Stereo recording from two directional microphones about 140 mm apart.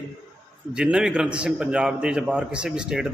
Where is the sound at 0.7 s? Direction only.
5° right (ahead or behind).